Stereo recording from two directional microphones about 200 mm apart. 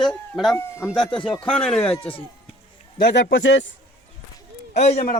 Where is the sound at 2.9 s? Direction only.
60° left (ahead or behind).